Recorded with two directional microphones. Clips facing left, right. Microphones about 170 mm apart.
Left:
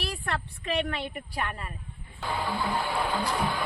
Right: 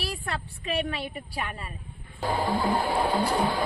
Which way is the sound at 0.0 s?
10° right (ahead or behind).